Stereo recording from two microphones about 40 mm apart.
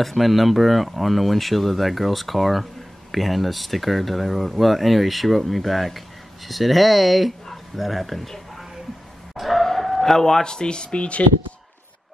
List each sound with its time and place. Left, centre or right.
0.0 s speech: centre; by 11.2 s left